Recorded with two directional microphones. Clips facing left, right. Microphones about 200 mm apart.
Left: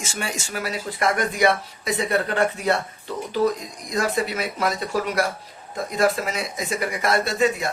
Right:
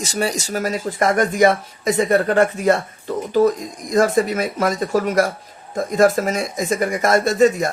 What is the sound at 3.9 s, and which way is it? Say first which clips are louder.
Speech: right 7 dB; 45° right (ahead or behind).